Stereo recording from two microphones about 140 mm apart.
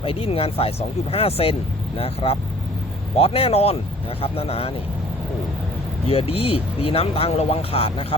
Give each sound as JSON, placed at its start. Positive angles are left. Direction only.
{"t": 0.0, "sound": "speech", "side_deg": 40}
{"t": 6.1, "sound": "speech", "side_deg": 45}